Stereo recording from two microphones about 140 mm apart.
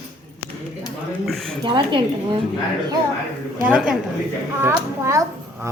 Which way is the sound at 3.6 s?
10° right (ahead or behind).